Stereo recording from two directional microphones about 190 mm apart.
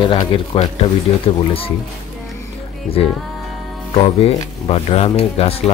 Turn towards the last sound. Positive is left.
turn(degrees=30)  # may be behind; listen again after turning